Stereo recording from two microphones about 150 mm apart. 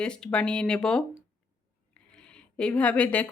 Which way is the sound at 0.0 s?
5° left (ahead or behind).